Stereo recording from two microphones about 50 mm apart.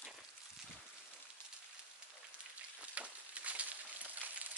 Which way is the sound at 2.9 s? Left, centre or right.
Right.